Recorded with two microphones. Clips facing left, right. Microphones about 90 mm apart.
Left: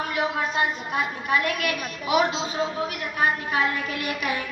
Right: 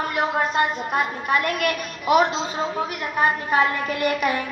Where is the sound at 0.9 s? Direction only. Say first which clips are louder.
Right 3 dB; 50° right (ahead or behind).